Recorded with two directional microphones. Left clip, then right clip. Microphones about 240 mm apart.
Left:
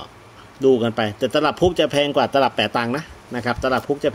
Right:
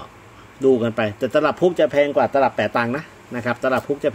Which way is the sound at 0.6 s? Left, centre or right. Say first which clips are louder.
Even; centre.